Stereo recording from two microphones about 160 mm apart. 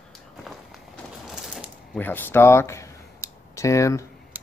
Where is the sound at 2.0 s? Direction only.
10° left (ahead or behind).